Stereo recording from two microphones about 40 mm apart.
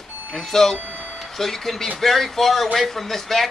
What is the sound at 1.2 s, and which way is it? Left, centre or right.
Speech, centre.